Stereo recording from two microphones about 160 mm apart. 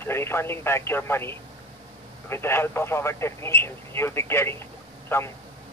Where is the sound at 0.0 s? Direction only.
15° left (ahead or behind).